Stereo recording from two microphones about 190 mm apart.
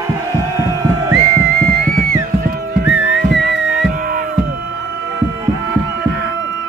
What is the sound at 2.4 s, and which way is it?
Music, 50° right (ahead or behind).